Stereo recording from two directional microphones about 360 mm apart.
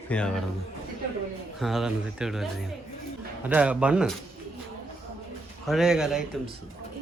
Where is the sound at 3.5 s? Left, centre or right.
Centre.